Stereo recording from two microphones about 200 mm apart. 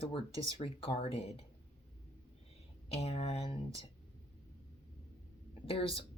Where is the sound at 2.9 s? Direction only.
30° left (ahead or behind).